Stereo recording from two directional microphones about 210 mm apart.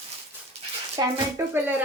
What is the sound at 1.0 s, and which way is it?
Speech, 20° right (ahead or behind).